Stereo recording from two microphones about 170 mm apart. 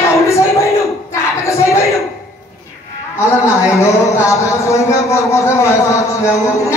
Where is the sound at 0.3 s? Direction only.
15° left (ahead or behind).